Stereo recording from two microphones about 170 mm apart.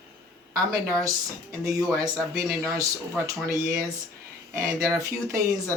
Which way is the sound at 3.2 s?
20° right (ahead or behind).